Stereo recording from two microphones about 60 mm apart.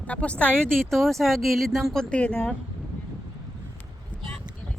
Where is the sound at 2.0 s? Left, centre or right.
Left.